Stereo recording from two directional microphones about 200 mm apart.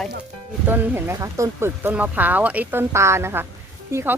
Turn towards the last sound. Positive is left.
turn(degrees=-10)  # may be behind; listen again after turning